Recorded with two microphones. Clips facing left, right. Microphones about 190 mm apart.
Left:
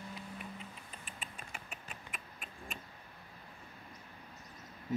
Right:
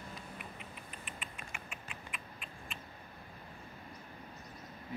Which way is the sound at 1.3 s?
35° left (ahead or behind).